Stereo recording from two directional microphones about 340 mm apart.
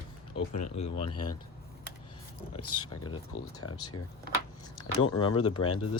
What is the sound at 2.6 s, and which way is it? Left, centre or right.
Speech, left.